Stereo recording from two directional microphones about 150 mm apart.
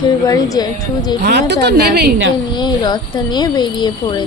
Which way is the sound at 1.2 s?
90° right.